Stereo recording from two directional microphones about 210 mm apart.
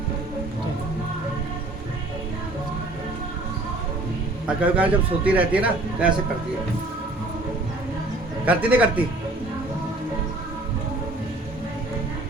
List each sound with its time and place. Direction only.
4.4 s a man's voice: 5° right (ahead or behind)
8.4 s a man's voice: 5° right (ahead or behind)